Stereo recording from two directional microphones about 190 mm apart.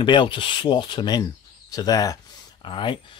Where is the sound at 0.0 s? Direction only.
25° left (ahead or behind).